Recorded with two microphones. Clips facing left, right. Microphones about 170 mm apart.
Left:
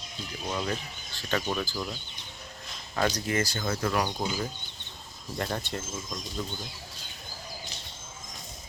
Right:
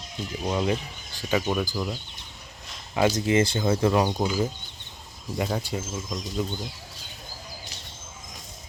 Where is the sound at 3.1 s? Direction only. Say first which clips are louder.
Right 7 dB; 25° right (ahead or behind).